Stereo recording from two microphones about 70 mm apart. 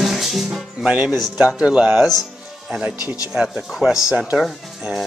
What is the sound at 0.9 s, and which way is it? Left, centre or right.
Speech, right.